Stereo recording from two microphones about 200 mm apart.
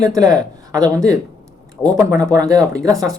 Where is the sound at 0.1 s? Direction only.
15° right (ahead or behind).